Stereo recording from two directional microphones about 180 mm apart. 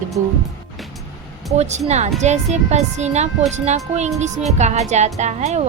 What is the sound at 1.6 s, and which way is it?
A woman's voice, 40° right (ahead or behind).